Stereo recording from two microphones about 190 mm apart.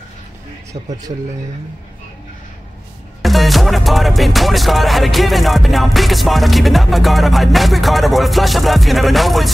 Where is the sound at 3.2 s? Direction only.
Centre (ahead or behind).